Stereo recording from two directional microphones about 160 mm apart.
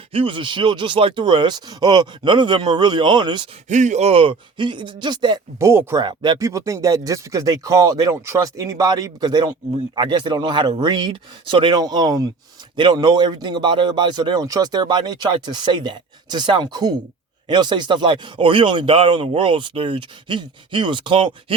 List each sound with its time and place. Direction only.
0.1 s a man's voice: 35° right (ahead or behind)
3.7 s speech: 50° right (ahead or behind); by 5.4 s 30° right (ahead or behind)
5.5 s a man's voice: 15° right (ahead or behind)